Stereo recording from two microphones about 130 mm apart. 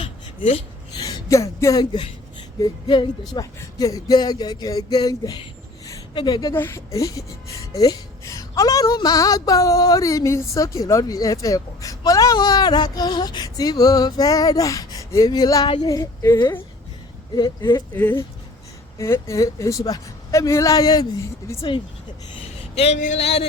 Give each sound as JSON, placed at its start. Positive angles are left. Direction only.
{"t": 0.0, "sound": "a sound", "side_deg": 50}
{"t": 0.9, "sound": "speech", "side_deg": 30}
{"t": 6.5, "sound": "a woman's voice", "side_deg": 20}
{"t": 15.6, "sound": "speech", "side_deg": 40}
{"t": 15.9, "sound": "a woman's voice", "side_deg": 25}
{"t": 17.9, "sound": "a woman's voice", "side_deg": 15}
{"t": 22.7, "sound": "speech", "side_deg": 55}
{"t": 23.0, "sound": "speech", "side_deg": 65}